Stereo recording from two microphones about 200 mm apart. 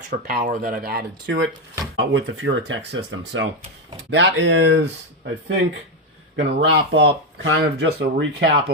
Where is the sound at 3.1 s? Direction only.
75° right (ahead or behind).